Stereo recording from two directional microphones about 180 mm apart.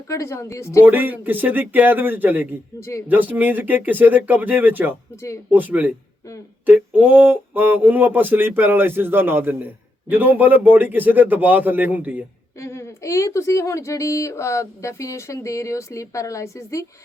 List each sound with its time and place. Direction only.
0.1 s speech: 15° left (ahead or behind)
0.8 s a sound: 10° right (ahead or behind)
12.5 s speech: 15° left (ahead or behind)